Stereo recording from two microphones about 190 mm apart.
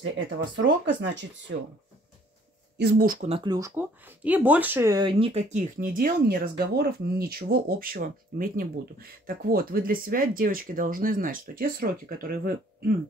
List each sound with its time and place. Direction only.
0.6 s speech: 70° right (ahead or behind)
2.8 s speech: 55° right (ahead or behind)
3.2 s speech: 30° right (ahead or behind); by 12.9 s 50° right (ahead or behind)